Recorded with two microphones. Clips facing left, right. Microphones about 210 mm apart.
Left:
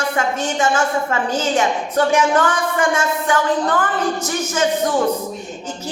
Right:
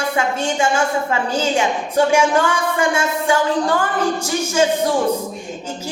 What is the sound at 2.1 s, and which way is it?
Speech, 10° right (ahead or behind).